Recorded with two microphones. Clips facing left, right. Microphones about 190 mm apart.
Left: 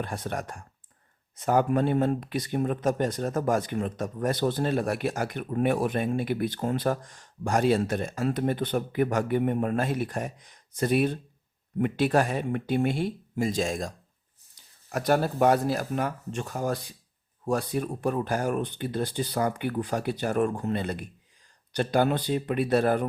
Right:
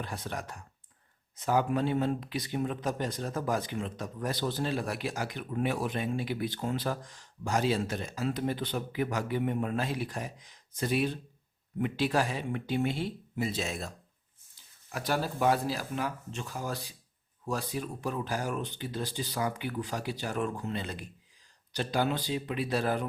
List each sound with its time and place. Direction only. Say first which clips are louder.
0.0 s speech: left 5 dB; 50° left (ahead or behind)